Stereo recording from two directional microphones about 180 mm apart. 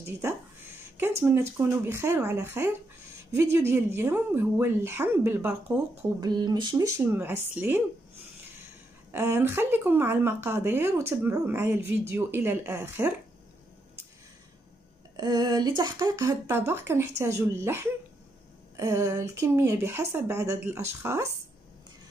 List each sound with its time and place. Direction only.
0.0 s speech: 15° right (ahead or behind)
6.2 s speech: 20° right (ahead or behind)
9.1 s speech: 10° right (ahead or behind)
15.1 s speech: 25° right (ahead or behind)